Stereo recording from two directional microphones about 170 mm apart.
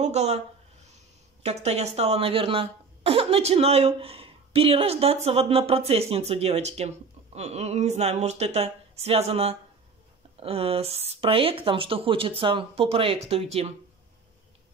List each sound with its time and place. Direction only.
0.0 s speech: 40° right (ahead or behind)
1.4 s speech: 40° right (ahead or behind)